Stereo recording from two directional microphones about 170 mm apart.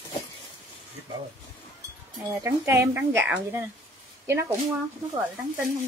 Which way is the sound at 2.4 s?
15° right (ahead or behind).